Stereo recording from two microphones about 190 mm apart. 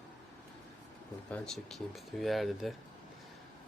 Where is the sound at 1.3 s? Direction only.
5° left (ahead or behind).